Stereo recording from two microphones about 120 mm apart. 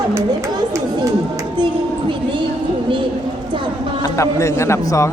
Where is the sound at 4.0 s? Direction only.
25° left (ahead or behind).